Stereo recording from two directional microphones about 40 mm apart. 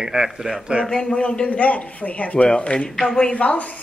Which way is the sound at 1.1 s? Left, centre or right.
Left.